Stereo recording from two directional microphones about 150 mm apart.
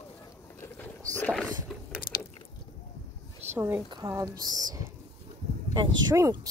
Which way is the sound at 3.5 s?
15° right (ahead or behind).